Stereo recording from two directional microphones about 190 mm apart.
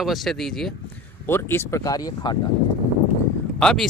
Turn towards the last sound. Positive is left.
turn(degrees=5)  # may be behind; listen again after turning